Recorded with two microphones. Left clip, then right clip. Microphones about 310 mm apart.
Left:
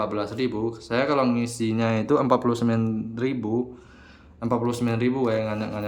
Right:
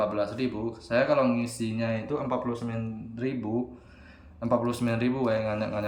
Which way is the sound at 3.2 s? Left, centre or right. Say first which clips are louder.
Left 4 dB; centre.